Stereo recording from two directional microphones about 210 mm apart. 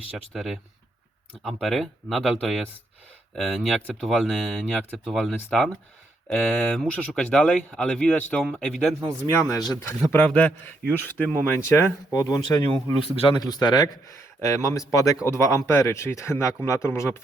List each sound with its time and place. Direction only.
0.3 s speech: centre (ahead or behind)
1.6 s speech: centre (ahead or behind)
9.3 s a man's voice: 15° left (ahead or behind)